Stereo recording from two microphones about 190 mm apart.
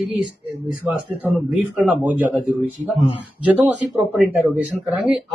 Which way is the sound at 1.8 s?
5° right (ahead or behind).